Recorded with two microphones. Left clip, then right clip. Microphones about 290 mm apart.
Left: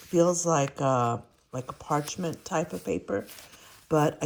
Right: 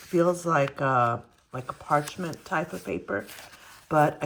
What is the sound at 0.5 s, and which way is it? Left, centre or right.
Speech, left.